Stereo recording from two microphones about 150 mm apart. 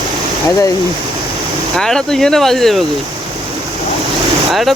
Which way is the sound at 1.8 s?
5° left (ahead or behind).